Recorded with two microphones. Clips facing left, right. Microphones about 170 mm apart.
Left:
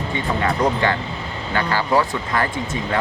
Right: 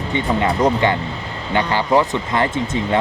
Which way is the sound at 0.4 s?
20° right (ahead or behind).